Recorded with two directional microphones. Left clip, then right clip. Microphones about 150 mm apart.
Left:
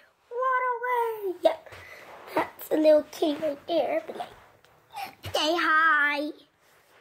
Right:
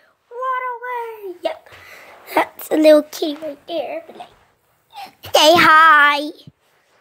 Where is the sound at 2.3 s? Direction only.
65° right (ahead or behind).